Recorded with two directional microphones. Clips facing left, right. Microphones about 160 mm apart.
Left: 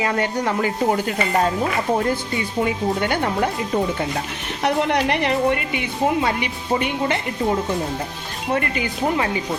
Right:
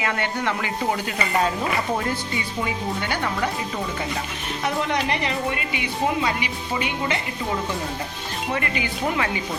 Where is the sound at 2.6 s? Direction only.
50° left (ahead or behind).